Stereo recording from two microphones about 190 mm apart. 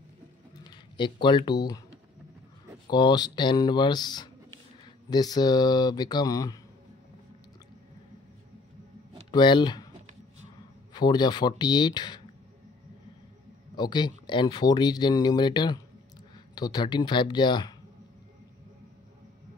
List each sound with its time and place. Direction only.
0.7 s speech: 25° left (ahead or behind)
2.9 s speech: 20° left (ahead or behind)
9.3 s speech: 25° left (ahead or behind)
10.9 s speech: 20° left (ahead or behind)
13.7 s speech: 25° left (ahead or behind)